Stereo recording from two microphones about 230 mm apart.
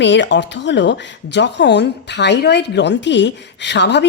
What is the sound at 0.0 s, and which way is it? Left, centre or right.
A woman's voice, left.